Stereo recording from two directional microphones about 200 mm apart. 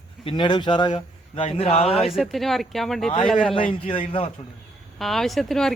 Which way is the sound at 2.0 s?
Centre (ahead or behind).